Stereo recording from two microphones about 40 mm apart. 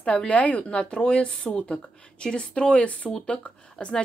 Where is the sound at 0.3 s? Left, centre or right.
Left.